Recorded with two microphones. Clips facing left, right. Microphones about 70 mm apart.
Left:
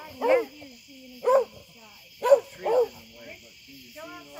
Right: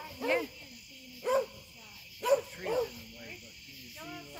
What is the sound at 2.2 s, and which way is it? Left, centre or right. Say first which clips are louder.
Bow-wow: left 9 dB; left.